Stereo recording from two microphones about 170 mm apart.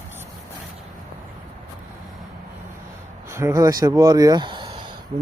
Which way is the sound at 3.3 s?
15° right (ahead or behind).